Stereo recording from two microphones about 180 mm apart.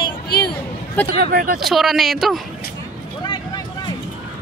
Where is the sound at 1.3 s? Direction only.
55° right (ahead or behind).